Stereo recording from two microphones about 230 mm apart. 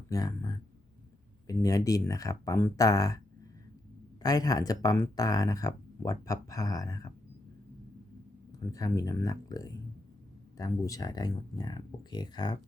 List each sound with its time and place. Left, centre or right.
0.1 s speech: centre
4.2 s speech: centre
8.5 s speech: centre